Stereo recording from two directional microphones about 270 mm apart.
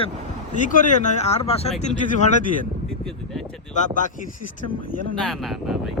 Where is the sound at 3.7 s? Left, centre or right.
Left.